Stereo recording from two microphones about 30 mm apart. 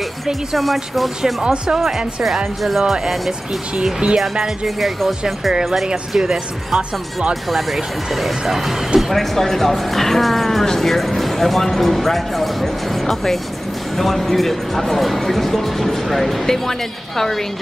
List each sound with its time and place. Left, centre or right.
0.6 s speech: centre
1.4 s speech: right
1.9 s speech: centre
4.0 s speech: right
4.6 s speech: centre
6.1 s speech: centre
9.1 s speech: centre